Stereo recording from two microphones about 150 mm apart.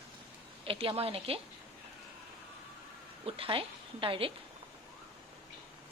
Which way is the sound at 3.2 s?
35° right (ahead or behind).